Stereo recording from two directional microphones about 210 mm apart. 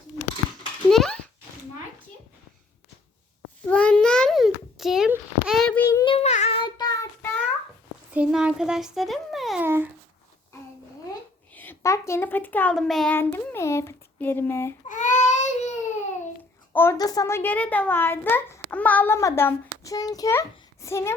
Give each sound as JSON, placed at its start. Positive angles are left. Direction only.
{"t": 0.9, "sound": "a sound", "side_deg": 0}
{"t": 3.7, "sound": "a sound", "side_deg": 5}
{"t": 8.1, "sound": "speech", "side_deg": -5}
{"t": 9.6, "sound": "a child's voice", "side_deg": -10}
{"t": 11.1, "sound": "a child's voice", "side_deg": 10}
{"t": 14.8, "sound": "baby cry", "side_deg": 35}
{"t": 16.7, "sound": "a child's voice", "side_deg": 10}